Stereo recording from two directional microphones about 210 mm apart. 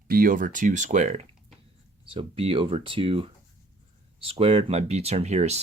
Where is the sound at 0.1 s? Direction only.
45° right (ahead or behind).